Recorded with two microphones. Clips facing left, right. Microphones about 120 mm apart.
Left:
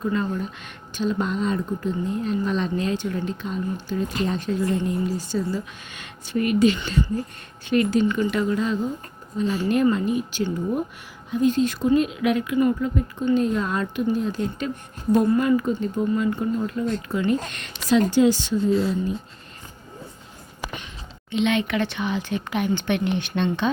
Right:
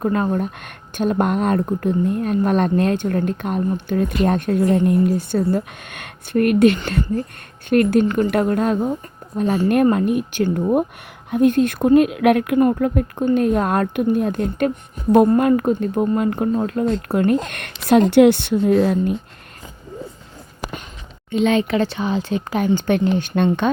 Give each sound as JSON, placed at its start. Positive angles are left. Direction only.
{"t": 0.0, "sound": "speech", "side_deg": -55}
{"t": 21.2, "sound": "speech", "side_deg": -40}